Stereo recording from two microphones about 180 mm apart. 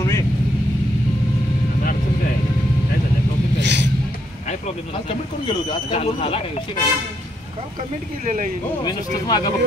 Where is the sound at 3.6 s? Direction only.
75° right (ahead or behind).